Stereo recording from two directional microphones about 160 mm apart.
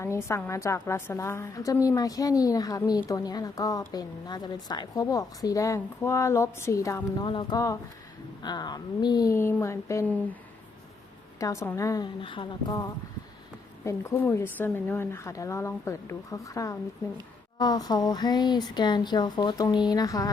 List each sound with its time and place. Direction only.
0.0 s a woman's voice: 15° left (ahead or behind)
7.3 s a woman's voice: 30° left (ahead or behind); by 10.3 s 15° left (ahead or behind)
11.3 s a woman's voice: 20° left (ahead or behind)
12.2 s a woman's voice: 30° left (ahead or behind)